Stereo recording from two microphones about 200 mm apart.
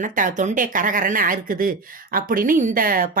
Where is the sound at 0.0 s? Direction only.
40° right (ahead or behind).